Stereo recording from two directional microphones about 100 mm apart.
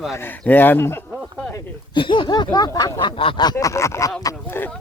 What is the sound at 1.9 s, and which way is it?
Snicker, 55° left (ahead or behind).